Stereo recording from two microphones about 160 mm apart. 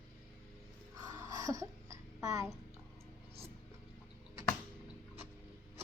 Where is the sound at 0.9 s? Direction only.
20° right (ahead or behind).